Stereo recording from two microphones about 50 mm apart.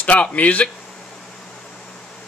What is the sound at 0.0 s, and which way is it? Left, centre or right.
Speech, left.